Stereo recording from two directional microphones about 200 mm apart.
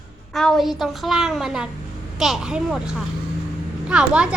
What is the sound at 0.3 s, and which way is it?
A woman's voice, centre (ahead or behind).